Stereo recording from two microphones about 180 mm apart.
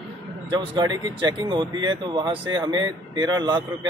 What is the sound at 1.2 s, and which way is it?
Speech, 25° right (ahead or behind).